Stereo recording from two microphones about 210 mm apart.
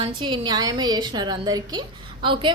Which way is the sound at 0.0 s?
20° right (ahead or behind).